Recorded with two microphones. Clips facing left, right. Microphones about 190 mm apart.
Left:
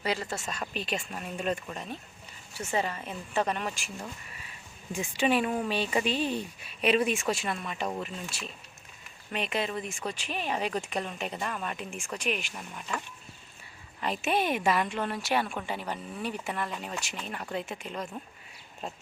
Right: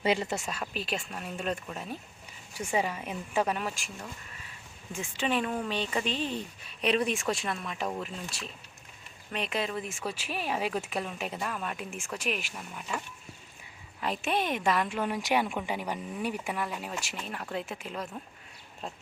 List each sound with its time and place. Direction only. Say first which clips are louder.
0.0 s speech: right 4 dB; 20° right (ahead or behind)
0.5 s a woman's voice: left 1 dB; 5° right (ahead or behind)
4.9 s a woman's voice: left 4 dB; 10° left (ahead or behind); by 13.0 s 5° right (ahead or behind)
14.0 s a woman's voice: left 2 dB; centre (ahead or behind)